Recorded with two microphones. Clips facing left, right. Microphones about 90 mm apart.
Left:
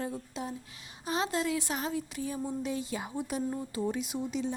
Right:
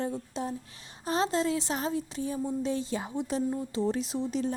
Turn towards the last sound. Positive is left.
turn(degrees=-35)  # may be behind; listen again after turning